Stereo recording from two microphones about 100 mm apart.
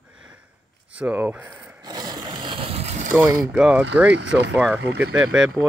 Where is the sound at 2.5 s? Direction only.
80° right.